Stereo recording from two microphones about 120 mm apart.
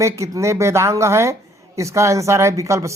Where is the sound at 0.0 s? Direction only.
25° right (ahead or behind).